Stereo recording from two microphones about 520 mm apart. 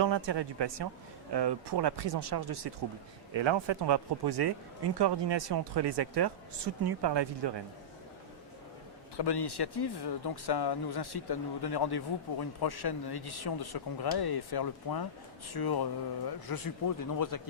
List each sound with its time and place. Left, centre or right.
0.0 s speech: right
3.3 s speech: right
9.1 s speech: left